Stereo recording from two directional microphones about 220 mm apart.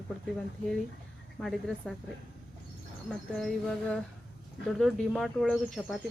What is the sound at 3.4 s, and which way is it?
Speech, centre (ahead or behind).